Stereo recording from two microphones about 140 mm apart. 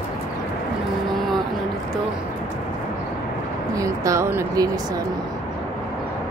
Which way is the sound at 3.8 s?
20° right (ahead or behind).